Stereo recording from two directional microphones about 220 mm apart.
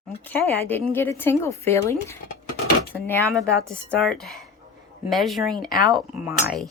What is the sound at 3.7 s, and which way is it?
Speech, 5° left (ahead or behind).